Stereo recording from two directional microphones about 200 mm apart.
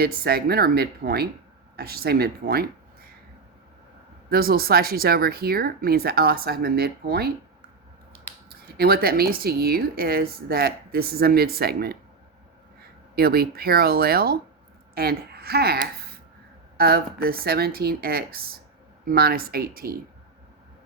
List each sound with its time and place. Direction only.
0.0 s a woman's voice: 50° right (ahead or behind)
4.3 s a woman's voice: 50° right (ahead or behind)
8.4 s a woman's voice: 50° right (ahead or behind)
13.1 s a woman's voice: 50° right (ahead or behind)